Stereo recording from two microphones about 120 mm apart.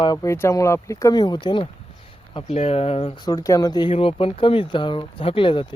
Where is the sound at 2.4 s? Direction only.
60° left (ahead or behind).